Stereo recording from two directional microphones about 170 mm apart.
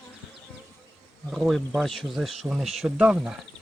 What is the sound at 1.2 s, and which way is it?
Speech, centre (ahead or behind).